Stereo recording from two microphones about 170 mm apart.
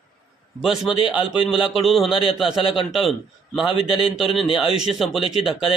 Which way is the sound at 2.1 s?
30° left (ahead or behind).